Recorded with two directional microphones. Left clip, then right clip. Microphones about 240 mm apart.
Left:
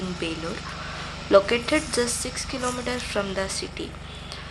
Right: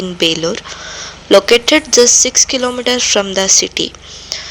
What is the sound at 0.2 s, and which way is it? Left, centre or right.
A woman's voice, right.